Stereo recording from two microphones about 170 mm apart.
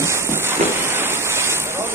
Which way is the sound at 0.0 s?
15° right (ahead or behind).